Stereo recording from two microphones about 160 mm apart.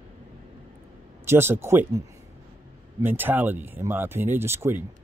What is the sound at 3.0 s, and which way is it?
Speech, 10° right (ahead or behind).